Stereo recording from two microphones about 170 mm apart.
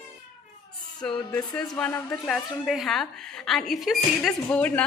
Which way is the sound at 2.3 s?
Centre (ahead or behind).